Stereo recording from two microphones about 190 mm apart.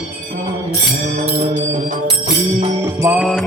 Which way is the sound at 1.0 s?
40° right (ahead or behind).